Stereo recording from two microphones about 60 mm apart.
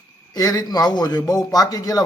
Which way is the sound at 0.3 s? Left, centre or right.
Left.